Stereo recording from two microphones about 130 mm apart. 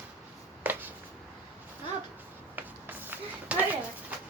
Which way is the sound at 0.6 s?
15° right (ahead or behind).